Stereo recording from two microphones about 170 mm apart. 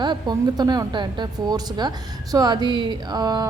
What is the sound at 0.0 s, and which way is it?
A woman's voice, 25° right (ahead or behind).